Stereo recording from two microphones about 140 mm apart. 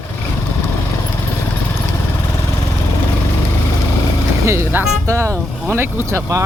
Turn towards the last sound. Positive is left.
turn(degrees=-20)  # may be behind; listen again after turning